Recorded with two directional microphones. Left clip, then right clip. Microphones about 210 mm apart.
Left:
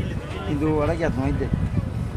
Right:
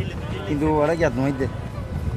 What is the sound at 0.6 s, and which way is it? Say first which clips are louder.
Speech: right 4 dB; 45° right (ahead or behind).